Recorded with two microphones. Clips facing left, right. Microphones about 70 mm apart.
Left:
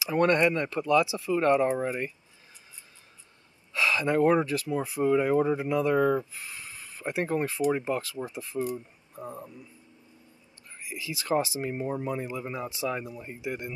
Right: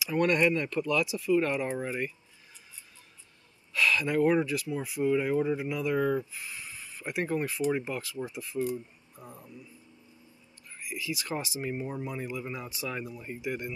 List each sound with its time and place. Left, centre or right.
0.1 s speech: left
3.7 s speech: left
11.1 s speech: left
12.3 s speech: left